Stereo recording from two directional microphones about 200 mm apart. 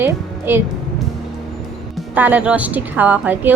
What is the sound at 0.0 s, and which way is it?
Music, 10° right (ahead or behind).